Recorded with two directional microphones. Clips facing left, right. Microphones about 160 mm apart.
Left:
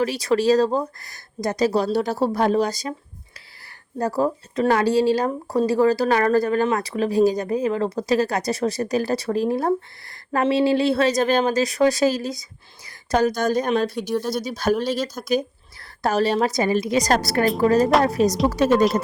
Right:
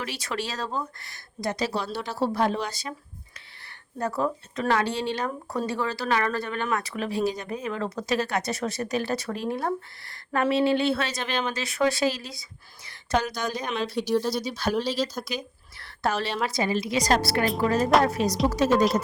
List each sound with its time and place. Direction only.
0.0 s speech: 35° left (ahead or behind)
3.9 s speech: 35° left (ahead or behind)
14.1 s speech: 5° left (ahead or behind)
14.3 s a woman's voice: 45° left (ahead or behind)
18.5 s speech: 60° left (ahead or behind)